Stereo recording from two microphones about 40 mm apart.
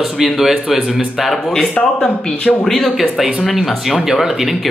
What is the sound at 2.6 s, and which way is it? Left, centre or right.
Speech, centre.